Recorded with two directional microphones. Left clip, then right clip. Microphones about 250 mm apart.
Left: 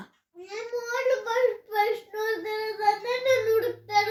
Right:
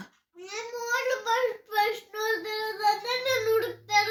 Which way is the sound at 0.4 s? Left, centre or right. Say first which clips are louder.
Left 1 dB; centre.